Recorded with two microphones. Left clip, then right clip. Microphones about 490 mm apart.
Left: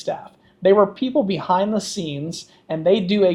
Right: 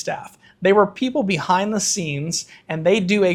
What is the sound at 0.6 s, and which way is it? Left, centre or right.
Speech, right.